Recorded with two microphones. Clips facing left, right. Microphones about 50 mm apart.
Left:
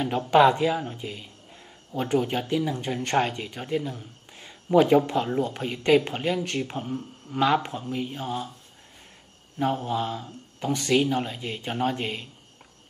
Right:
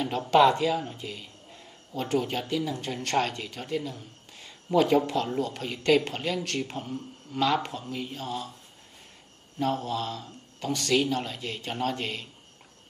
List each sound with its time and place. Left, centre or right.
0.3 s speech: centre
9.6 s speech: centre